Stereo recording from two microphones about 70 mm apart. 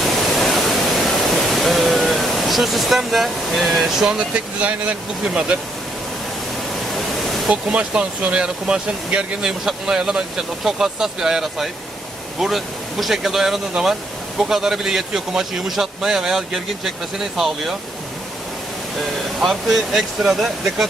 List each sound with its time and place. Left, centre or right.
0.0 s waterfall: centre
1.5 s a sound: centre
4.4 s speech: centre
6.7 s pink noise: centre
7.5 s a man's voice: centre
18.9 s a man's voice: centre